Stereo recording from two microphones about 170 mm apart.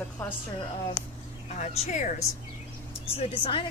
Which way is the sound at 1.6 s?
40° left (ahead or behind).